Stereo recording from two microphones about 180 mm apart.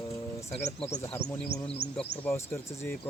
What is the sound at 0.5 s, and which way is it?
Speech, 35° left (ahead or behind).